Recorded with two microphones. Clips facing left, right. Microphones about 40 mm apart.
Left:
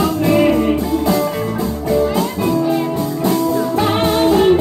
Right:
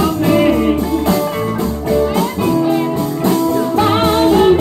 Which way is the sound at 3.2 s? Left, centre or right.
Right.